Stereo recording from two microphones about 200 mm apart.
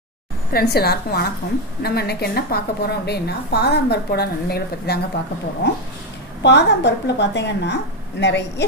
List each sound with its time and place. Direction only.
0.5 s a woman's voice: 50° left (ahead or behind)